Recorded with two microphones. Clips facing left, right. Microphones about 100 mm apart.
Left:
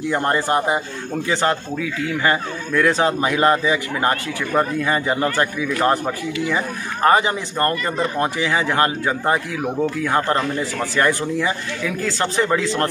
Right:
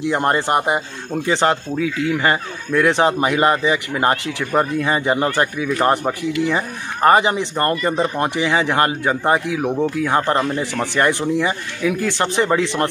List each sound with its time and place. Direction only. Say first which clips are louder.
0.1 s speech: right 1 dB; 20° right (ahead or behind)